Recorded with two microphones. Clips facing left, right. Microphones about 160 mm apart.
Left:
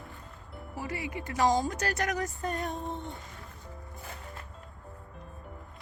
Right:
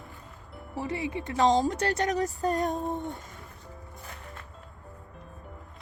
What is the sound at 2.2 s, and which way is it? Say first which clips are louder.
Female singing: right 6 dB; 40° right (ahead or behind).